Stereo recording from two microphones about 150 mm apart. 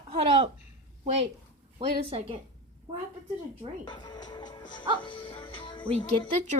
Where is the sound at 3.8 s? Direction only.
30° left (ahead or behind).